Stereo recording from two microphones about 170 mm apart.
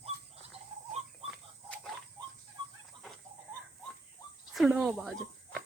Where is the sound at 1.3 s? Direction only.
Centre (ahead or behind).